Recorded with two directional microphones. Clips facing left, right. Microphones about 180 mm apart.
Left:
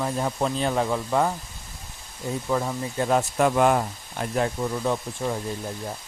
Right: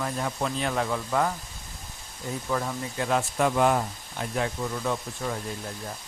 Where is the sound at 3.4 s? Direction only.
55° left (ahead or behind).